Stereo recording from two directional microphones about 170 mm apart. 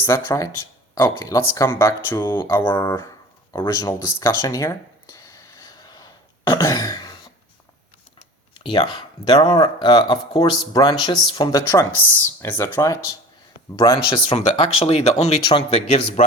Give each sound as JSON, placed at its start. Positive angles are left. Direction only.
{"t": 0.0, "sound": "speech", "side_deg": 15}
{"t": 3.6, "sound": "a sound", "side_deg": 20}
{"t": 6.5, "sound": "speech", "side_deg": 20}
{"t": 8.5, "sound": "speech", "side_deg": 25}